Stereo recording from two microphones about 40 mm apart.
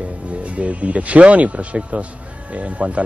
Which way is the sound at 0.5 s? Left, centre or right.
Right.